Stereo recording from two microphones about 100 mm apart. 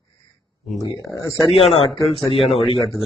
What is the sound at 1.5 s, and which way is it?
Speech, 70° left (ahead or behind).